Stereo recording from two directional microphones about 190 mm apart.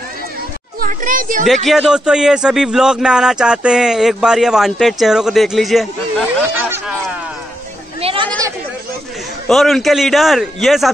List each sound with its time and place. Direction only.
0.7 s a child's voice: 45° right (ahead or behind)
1.5 s a man's voice: centre (ahead or behind)
8.0 s chatter: 30° right (ahead or behind)
9.5 s a man's voice: centre (ahead or behind)